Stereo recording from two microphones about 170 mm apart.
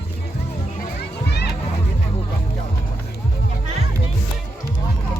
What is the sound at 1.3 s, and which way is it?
Music, 75° left (ahead or behind).